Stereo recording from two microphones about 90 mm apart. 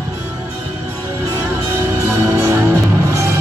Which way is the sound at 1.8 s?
30° right (ahead or behind).